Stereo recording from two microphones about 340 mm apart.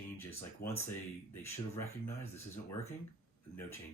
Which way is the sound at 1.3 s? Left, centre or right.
Centre.